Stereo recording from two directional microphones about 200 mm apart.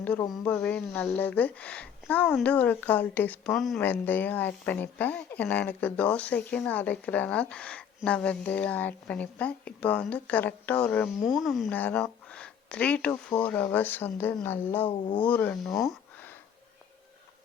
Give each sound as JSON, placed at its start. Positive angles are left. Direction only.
{"t": 0.3, "sound": "speech", "side_deg": 5}
{"t": 14.8, "sound": "speech", "side_deg": 25}
{"t": 15.2, "sound": "speech", "side_deg": 10}
{"t": 15.8, "sound": "a sound", "side_deg": 0}